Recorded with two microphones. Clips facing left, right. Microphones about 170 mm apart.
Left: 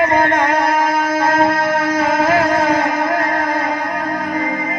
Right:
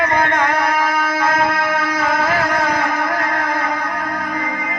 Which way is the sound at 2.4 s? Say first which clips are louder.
Left 4 dB; 25° left (ahead or behind).